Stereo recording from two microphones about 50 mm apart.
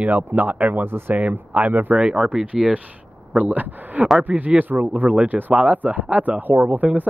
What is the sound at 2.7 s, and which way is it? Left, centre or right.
Speech, right.